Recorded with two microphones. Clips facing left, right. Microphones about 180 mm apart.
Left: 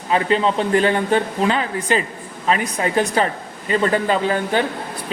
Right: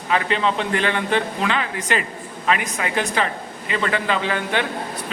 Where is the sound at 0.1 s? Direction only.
35° left (ahead or behind).